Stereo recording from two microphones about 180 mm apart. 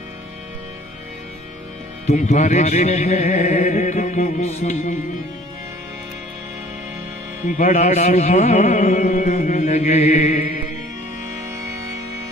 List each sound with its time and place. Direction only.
2.0 s music: 40° left (ahead or behind)
7.4 s music: 45° left (ahead or behind)
11.7 s music: 20° right (ahead or behind)